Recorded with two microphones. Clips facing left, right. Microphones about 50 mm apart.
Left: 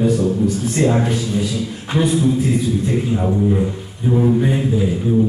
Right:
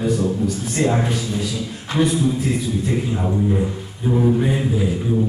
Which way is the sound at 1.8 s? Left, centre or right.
Centre.